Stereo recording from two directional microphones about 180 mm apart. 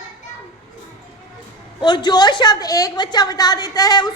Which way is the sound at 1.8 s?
25° left (ahead or behind).